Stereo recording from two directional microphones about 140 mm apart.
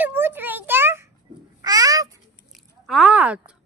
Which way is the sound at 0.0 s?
15° right (ahead or behind).